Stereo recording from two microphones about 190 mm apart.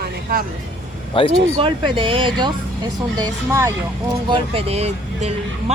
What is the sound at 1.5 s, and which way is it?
Speech, 25° right (ahead or behind).